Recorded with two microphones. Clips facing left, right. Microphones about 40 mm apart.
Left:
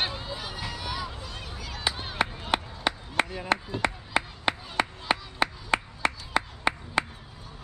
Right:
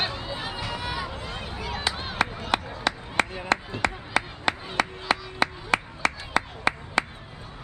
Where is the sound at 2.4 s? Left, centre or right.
Centre.